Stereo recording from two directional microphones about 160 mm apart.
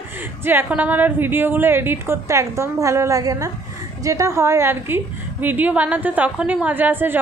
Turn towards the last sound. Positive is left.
turn(degrees=-10)  # may be behind; listen again after turning